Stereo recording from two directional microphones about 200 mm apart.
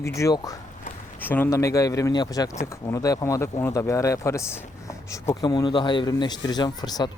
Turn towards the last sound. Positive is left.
turn(degrees=20)  # may be behind; listen again after turning